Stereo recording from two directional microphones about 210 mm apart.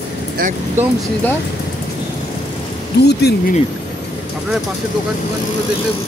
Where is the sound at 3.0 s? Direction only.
50° left (ahead or behind).